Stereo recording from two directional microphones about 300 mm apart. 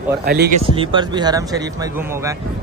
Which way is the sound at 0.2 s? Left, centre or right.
Right.